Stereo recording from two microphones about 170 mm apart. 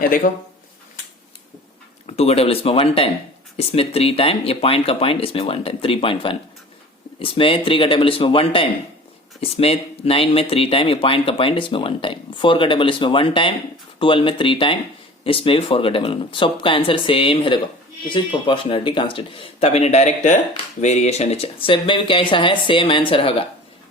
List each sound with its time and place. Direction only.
0.2 s speech: 50° left (ahead or behind)
2.0 s speech: 40° left (ahead or behind)